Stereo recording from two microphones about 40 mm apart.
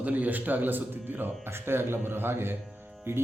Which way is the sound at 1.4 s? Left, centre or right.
Right.